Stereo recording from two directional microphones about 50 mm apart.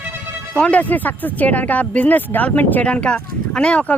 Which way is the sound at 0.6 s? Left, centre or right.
Left.